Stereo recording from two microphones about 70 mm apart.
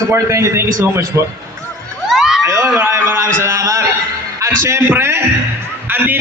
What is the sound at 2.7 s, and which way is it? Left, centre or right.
A man's voice, right.